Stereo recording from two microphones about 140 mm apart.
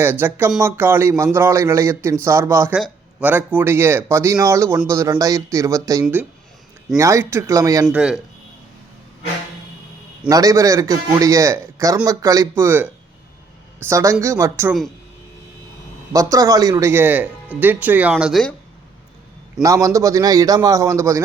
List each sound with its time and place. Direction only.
0.0 s a man's voice: 15° right (ahead or behind)
2.7 s a man's voice: 5° right (ahead or behind); by 7.9 s 25° right (ahead or behind)
7.9 s a man's voice: 5° right (ahead or behind)
10.2 s a man's voice: 25° right (ahead or behind)
16.1 s speech: 25° right (ahead or behind)
18.1 s a man's voice: centre (ahead or behind)
19.6 s a man's voice: 25° right (ahead or behind)